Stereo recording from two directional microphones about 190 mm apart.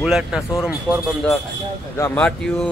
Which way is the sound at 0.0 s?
5° right (ahead or behind).